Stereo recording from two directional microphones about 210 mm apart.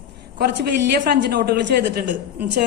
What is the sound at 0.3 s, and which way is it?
A man's voice, 50° right (ahead or behind).